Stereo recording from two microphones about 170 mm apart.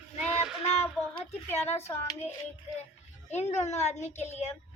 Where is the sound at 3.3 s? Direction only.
40° left (ahead or behind).